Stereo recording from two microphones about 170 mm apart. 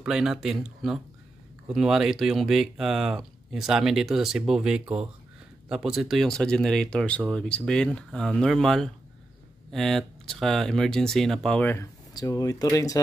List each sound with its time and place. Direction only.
0.0 s speech: 5° right (ahead or behind); by 13.0 s 20° left (ahead or behind)